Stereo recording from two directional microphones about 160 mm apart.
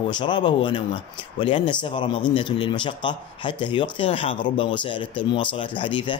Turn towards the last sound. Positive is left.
turn(degrees=30)  # may be behind; listen again after turning